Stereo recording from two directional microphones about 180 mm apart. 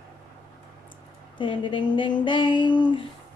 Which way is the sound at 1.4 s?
25° left (ahead or behind).